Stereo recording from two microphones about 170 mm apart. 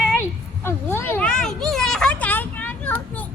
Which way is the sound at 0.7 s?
15° left (ahead or behind).